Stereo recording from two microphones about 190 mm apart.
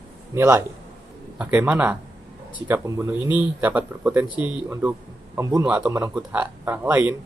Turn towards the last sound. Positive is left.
turn(degrees=-10)  # may be behind; listen again after turning